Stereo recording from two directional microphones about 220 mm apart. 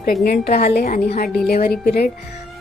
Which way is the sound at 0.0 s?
45° left (ahead or behind).